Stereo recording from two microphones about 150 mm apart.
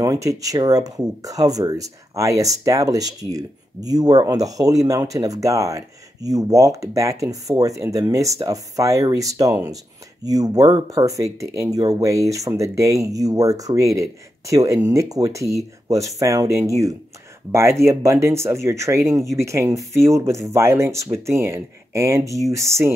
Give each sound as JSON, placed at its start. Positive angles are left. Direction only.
{"t": 0.0, "sound": "speech", "side_deg": -20}